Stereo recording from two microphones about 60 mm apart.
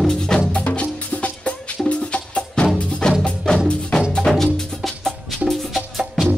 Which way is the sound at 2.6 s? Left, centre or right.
Centre.